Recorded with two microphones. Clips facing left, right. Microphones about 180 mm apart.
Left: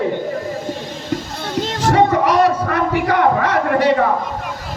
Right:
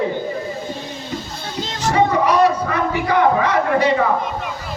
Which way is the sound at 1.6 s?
55° left (ahead or behind).